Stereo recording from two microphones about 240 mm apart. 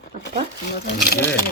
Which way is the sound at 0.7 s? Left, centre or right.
Left.